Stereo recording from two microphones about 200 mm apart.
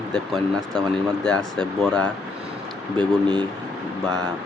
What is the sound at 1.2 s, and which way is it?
Speech, 5° left (ahead or behind).